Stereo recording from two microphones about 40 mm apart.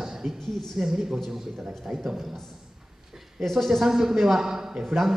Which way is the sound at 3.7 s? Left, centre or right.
Centre.